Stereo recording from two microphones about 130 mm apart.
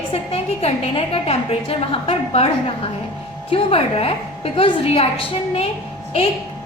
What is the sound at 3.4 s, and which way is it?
A woman's voice, 50° left (ahead or behind).